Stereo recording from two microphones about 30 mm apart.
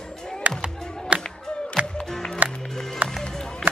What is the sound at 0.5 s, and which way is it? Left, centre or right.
Music, right.